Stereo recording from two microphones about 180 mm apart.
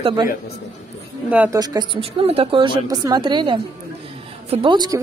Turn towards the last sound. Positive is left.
turn(degrees=-25)  # may be behind; listen again after turning